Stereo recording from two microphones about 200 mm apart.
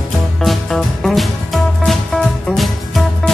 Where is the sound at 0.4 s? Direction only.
Centre (ahead or behind).